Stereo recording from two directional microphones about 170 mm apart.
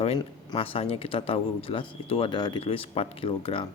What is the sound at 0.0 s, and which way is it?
Speech, 30° left (ahead or behind).